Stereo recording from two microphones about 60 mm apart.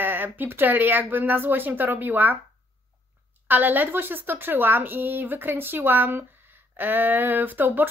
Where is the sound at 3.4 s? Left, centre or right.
Right.